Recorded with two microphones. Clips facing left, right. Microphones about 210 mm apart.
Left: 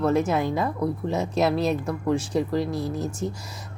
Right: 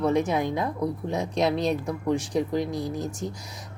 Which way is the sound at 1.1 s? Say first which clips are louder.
Left 2 dB; 5° left (ahead or behind).